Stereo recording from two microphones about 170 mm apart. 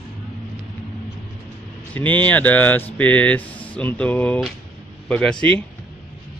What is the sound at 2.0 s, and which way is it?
Speech, 10° left (ahead or behind).